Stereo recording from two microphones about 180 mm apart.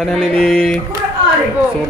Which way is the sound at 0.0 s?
Centre (ahead or behind).